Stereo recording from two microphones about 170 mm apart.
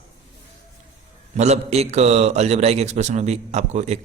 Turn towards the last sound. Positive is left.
turn(degrees=-40)  # may be behind; listen again after turning